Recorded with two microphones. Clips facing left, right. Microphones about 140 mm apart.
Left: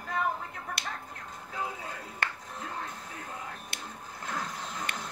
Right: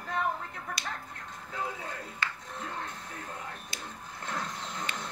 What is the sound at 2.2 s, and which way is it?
Music, 55° left (ahead or behind).